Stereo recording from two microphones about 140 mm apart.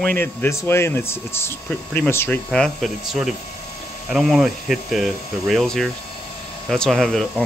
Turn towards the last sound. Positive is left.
turn(degrees=5)  # may be behind; listen again after turning